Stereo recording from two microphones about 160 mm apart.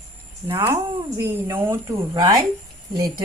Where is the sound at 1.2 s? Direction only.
15° right (ahead or behind).